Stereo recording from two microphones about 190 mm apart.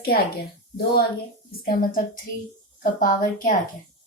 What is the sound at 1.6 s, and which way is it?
A woman's voice, 50° left (ahead or behind).